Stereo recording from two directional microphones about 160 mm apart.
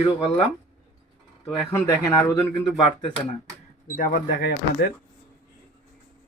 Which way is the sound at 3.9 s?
55° left (ahead or behind).